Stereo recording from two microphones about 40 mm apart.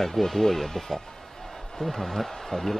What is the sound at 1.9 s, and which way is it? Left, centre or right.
Speech, centre.